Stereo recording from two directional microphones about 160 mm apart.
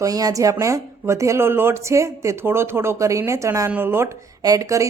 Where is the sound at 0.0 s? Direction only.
25° right (ahead or behind).